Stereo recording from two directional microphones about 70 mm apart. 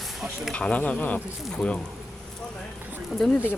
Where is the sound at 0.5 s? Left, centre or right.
Centre.